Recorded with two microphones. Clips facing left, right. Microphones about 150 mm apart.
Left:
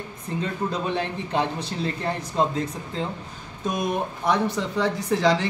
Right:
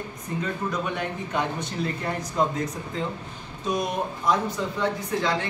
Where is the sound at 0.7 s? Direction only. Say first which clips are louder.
Left 2 dB; 30° left (ahead or behind).